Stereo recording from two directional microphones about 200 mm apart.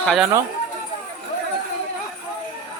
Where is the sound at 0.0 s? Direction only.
Centre (ahead or behind).